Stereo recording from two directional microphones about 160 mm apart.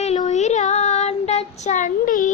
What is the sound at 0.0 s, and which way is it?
Child singing, 45° left (ahead or behind).